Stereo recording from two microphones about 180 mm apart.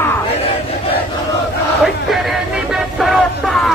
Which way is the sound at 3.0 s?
Centre (ahead or behind).